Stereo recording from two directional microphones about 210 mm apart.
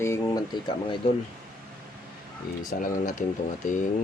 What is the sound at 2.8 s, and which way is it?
Speech, 40° left (ahead or behind).